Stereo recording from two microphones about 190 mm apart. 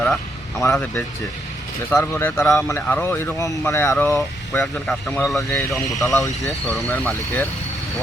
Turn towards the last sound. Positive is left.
turn(degrees=10)  # may be behind; listen again after turning